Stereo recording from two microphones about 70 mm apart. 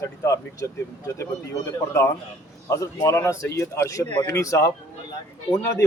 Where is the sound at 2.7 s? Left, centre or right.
Left.